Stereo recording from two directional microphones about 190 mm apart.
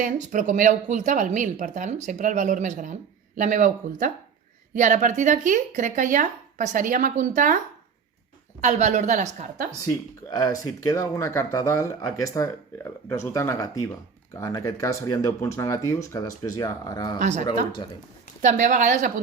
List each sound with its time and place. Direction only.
0.0 s speech: 45° right (ahead or behind)
8.6 s speech: 40° right (ahead or behind)
9.8 s speech: 20° left (ahead or behind)
17.2 s speech: 40° right (ahead or behind)
18.4 s speech: 40° right (ahead or behind)